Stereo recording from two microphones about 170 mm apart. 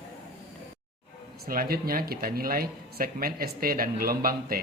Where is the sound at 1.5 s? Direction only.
60° right (ahead or behind).